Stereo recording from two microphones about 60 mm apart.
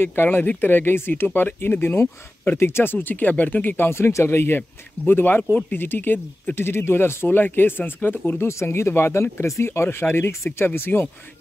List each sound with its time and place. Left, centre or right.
0.0 s speech: left
6.5 s speech: left
8.5 s speech: left